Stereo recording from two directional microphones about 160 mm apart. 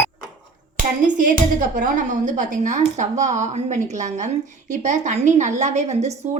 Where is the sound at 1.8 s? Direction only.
55° right (ahead or behind).